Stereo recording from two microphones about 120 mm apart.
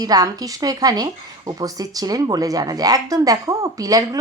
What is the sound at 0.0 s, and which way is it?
Speech, 30° right (ahead or behind).